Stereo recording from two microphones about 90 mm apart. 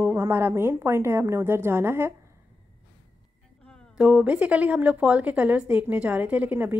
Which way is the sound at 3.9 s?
15° right (ahead or behind).